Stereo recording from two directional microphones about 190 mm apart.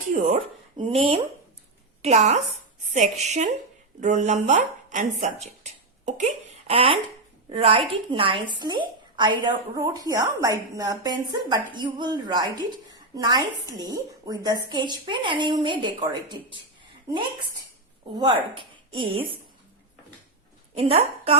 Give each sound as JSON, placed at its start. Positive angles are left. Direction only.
{"t": 0.1, "sound": "speech", "side_deg": -40}
{"t": 0.8, "sound": "a woman's voice", "side_deg": -30}
{"t": 18.2, "sound": "a woman's voice", "side_deg": -25}
{"t": 20.7, "sound": "speech", "side_deg": -30}